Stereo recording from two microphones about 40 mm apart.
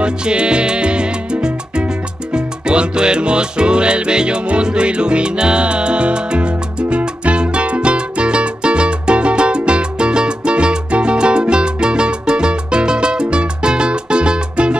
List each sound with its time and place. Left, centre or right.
0.0 s salsa music: right
2.3 s music: right